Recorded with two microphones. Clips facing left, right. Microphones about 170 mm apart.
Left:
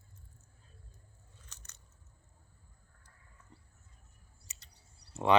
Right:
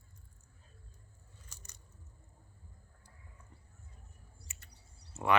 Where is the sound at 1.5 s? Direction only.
10° right (ahead or behind).